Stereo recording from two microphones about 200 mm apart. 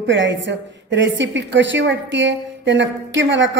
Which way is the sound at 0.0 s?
65° right (ahead or behind).